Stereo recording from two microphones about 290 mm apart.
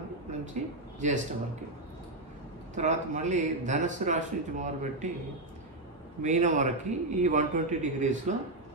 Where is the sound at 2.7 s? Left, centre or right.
Right.